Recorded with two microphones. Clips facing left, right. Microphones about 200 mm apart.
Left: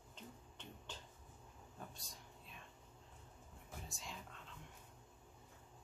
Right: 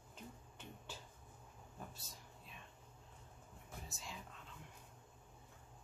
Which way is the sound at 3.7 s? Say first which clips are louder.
Even; centre (ahead or behind).